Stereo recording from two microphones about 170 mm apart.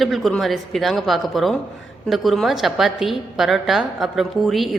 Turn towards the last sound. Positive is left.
turn(degrees=0)  # may be behind; listen again after turning